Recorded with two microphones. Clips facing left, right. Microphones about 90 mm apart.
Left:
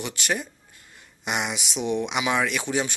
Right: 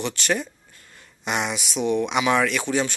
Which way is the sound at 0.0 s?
10° left (ahead or behind).